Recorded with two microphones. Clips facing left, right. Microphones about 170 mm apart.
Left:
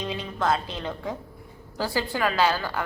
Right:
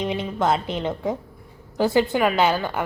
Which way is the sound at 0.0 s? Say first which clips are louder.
Right 5 dB; 20° right (ahead or behind).